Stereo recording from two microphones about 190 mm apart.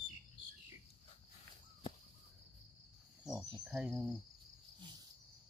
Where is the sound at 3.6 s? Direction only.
5° right (ahead or behind).